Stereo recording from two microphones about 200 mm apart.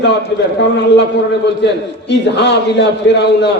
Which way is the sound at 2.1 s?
60° left (ahead or behind).